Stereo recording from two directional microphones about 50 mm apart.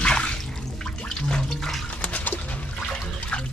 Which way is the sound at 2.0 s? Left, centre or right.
Left.